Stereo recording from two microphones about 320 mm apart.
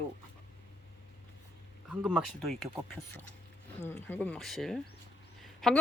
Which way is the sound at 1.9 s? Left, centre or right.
Centre.